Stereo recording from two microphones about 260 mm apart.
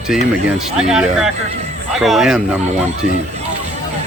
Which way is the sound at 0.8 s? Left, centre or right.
Centre.